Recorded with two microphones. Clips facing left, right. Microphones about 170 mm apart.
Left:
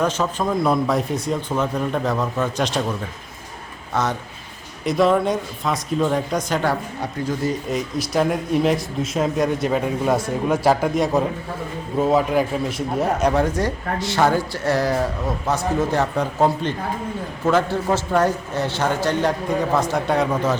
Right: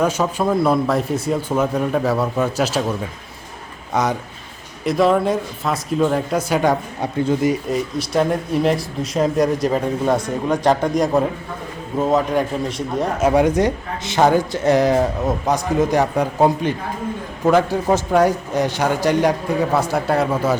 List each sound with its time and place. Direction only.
0.0 s a man's voice: 10° right (ahead or behind)
3.9 s a man's voice: 15° right (ahead or behind)
4.9 s speech: centre (ahead or behind); by 7.5 s 20° right (ahead or behind)
7.7 s speech: centre (ahead or behind)
13.3 s a man's voice: 20° right (ahead or behind)